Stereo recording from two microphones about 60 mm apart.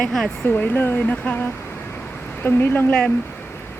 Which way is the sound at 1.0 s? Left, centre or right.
Left.